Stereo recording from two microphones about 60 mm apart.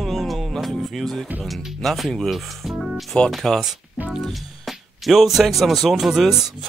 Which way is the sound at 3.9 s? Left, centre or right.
Centre.